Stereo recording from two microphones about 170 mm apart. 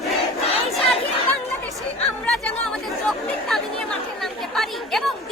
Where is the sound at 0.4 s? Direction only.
35° left (ahead or behind).